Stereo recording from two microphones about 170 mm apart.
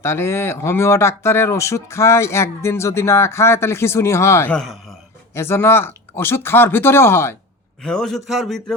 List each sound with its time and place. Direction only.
0.0 s speech: 15° left (ahead or behind)
4.5 s a man's voice: centre (ahead or behind)
5.3 s speech: 15° left (ahead or behind)
7.8 s a man's voice: 5° left (ahead or behind)